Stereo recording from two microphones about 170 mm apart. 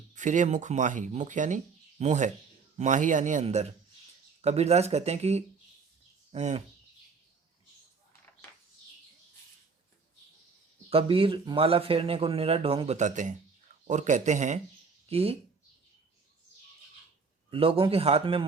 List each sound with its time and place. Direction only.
0.1 s speech: 45° right (ahead or behind)
10.8 s speech: 35° right (ahead or behind)
17.5 s speech: 30° right (ahead or behind)